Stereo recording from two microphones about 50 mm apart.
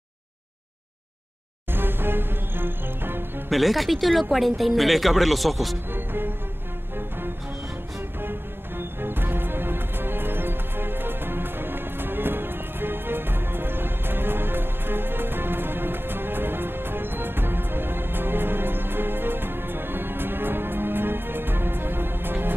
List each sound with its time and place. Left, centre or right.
1.7 s music: right
3.4 s speech: centre
5.9 s music: right
8.2 s music: right